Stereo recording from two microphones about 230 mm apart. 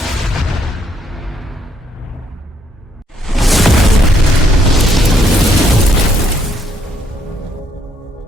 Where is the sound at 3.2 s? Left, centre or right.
Centre.